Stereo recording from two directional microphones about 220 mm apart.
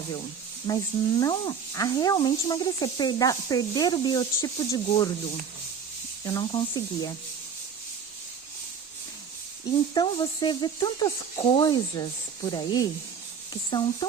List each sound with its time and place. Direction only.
0.7 s speech: 15° left (ahead or behind)
6.2 s speech: 20° left (ahead or behind)
9.9 s speech: 20° left (ahead or behind)